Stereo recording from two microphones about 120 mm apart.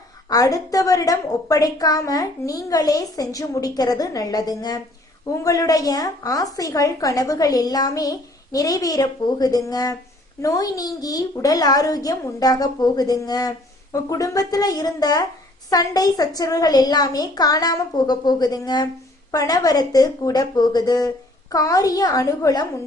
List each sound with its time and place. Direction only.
0.3 s a woman's voice: 30° left (ahead or behind)